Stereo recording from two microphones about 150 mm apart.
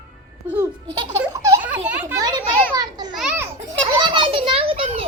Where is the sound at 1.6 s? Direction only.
10° right (ahead or behind).